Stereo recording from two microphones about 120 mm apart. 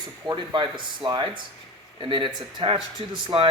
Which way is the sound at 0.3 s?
40° right (ahead or behind).